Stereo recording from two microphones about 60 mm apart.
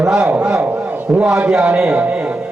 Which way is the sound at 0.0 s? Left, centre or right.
Centre.